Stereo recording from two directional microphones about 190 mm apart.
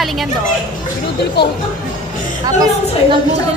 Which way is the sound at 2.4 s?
20° right (ahead or behind).